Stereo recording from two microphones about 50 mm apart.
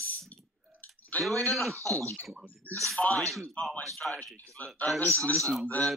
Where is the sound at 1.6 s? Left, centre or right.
Right.